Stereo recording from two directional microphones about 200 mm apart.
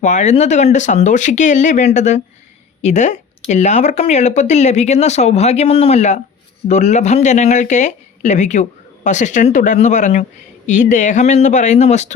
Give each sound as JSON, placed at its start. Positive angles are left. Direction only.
{"t": 0.0, "sound": "speech", "side_deg": 35}